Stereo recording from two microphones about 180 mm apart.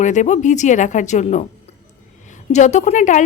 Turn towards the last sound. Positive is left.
turn(degrees=45)  # may be behind; listen again after turning